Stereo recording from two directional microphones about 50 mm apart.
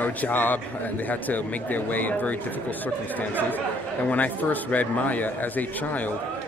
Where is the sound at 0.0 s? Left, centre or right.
Left.